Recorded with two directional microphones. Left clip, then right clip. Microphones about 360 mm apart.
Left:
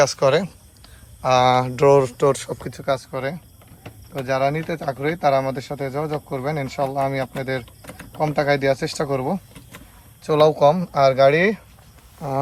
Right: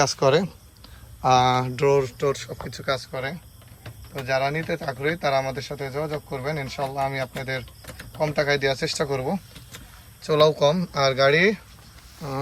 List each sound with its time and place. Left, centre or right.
0.0 s speech: centre